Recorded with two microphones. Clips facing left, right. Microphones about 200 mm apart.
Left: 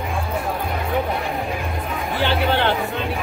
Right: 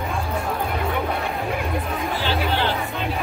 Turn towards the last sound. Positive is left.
turn(degrees=60)  # may be behind; listen again after turning